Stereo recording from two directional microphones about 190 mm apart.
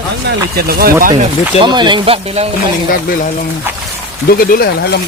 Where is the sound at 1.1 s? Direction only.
25° right (ahead or behind).